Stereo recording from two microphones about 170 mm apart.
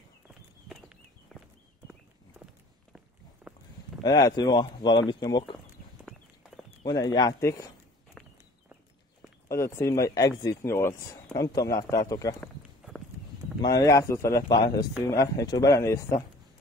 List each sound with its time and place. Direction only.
0.7 s walk: centre (ahead or behind)
3.5 s a sound: centre (ahead or behind)
4.0 s speech: 25° left (ahead or behind)
6.8 s speech: 20° left (ahead or behind)
8.2 s walk: 5° left (ahead or behind)
9.5 s speech: 15° left (ahead or behind)
12.4 s a sound: centre (ahead or behind)
13.6 s speech: 20° left (ahead or behind)